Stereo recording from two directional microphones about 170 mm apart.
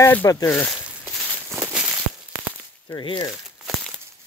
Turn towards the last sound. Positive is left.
turn(degrees=25)  # may be behind; listen again after turning